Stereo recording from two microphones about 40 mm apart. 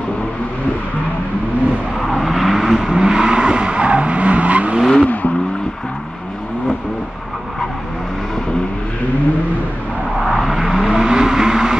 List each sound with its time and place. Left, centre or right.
2.0 s vehicle: centre; by 4.7 s right
5.0 s vehicle: left
10.6 s vehicle: centre